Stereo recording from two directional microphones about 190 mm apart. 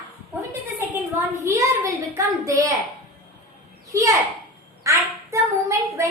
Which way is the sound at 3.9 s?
15° right (ahead or behind).